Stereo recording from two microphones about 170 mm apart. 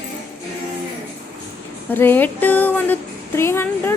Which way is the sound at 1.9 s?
10° left (ahead or behind).